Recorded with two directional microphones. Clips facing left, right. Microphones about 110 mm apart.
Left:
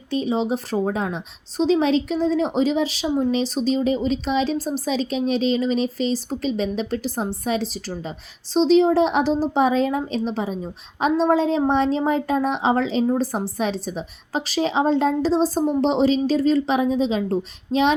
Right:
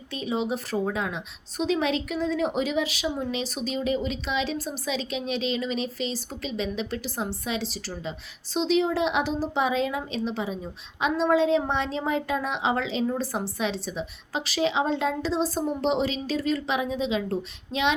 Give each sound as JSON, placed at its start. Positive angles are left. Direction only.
{"t": 0.1, "sound": "speech", "side_deg": 35}